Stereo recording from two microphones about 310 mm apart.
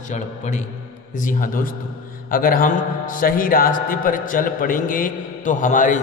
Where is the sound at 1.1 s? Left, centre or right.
Left.